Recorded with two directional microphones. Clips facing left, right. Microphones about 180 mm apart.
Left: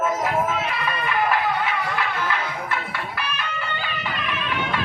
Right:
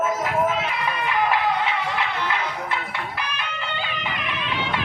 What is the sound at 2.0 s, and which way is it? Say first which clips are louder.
Music: even; 20° right (ahead or behind).